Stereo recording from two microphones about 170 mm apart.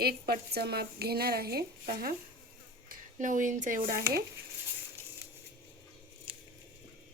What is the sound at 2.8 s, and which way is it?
Speech, 50° right (ahead or behind).